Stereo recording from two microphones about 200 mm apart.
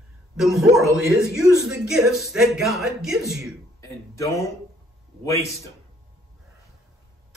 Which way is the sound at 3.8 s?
15° left (ahead or behind).